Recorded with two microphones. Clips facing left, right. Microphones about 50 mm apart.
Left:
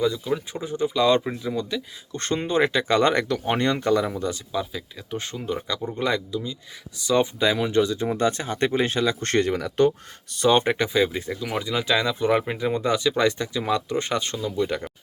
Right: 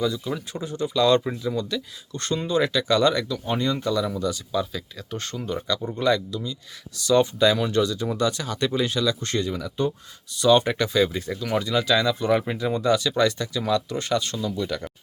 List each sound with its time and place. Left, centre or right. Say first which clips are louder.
0.0 s speech: left 2 dB; centre
2.1 s speech: left 1 dB; left
3.2 s speech: left 2 dB; left
4.5 s speech: right 2 dB; centre; by 9.3 s left
9.3 s speech: left 4 dB; left
10.3 s speech: right 1 dB; left